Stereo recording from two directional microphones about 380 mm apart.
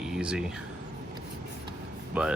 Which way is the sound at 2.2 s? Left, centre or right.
Centre.